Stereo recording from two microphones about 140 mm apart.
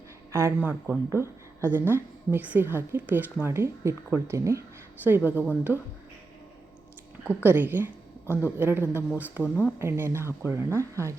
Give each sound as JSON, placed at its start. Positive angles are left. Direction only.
{"t": 0.3, "sound": "speech", "side_deg": -20}
{"t": 5.7, "sound": "speech", "side_deg": 15}
{"t": 7.3, "sound": "speech", "side_deg": -15}